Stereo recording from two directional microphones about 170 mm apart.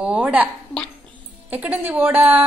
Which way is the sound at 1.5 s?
10° right (ahead or behind).